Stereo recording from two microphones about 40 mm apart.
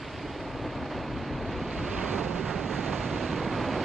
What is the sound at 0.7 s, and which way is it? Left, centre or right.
Vehicle, centre.